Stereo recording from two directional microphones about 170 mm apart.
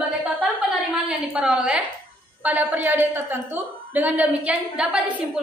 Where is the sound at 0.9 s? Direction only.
5° right (ahead or behind).